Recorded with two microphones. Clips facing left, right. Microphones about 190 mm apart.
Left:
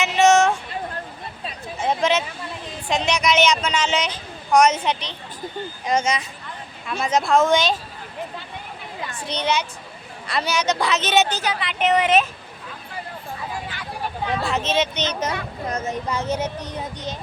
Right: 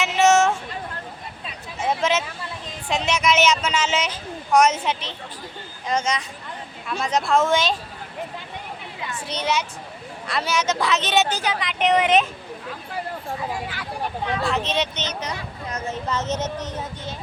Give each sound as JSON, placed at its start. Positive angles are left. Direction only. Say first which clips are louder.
{"t": 0.0, "sound": "a sound", "louder": "left 1 dB", "side_deg": -5}
{"t": 1.8, "sound": "a sound", "louder": "left 1 dB", "side_deg": -5}
{"t": 2.9, "sound": "a woman's voice", "louder": "left 1 dB", "side_deg": -5}
{"t": 5.8, "sound": "a woman's voice", "louder": "left 2 dB", "side_deg": 10}
{"t": 9.2, "sound": "a woman's voice", "louder": "left 1 dB", "side_deg": -5}
{"t": 11.3, "sound": "speech", "louder": "even", "side_deg": -15}
{"t": 14.4, "sound": "a woman's voice", "louder": "left 2 dB", "side_deg": 0}
{"t": 15.2, "sound": "speech", "louder": "left 5 dB", "side_deg": 55}
{"t": 15.9, "sound": "speech", "louder": "right 1 dB", "side_deg": 10}